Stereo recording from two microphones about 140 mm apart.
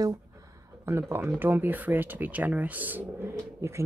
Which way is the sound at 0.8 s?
20° right (ahead or behind).